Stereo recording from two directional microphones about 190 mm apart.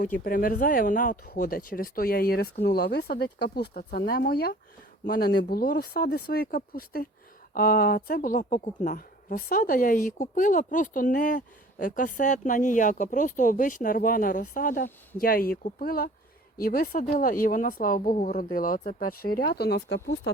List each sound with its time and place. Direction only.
0.0 s speech: 45° left (ahead or behind)